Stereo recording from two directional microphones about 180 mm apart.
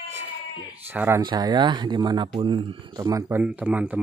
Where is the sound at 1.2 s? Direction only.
25° right (ahead or behind).